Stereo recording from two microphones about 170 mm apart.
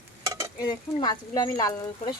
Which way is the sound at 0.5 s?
25° left (ahead or behind).